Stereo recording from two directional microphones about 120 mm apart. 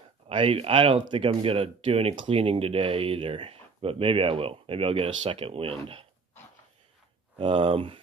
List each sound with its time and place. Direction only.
0.3 s speech: 50° right (ahead or behind)
7.3 s speech: 45° right (ahead or behind)